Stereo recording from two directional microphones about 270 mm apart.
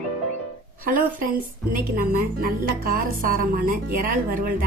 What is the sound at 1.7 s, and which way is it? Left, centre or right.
A woman's voice, right.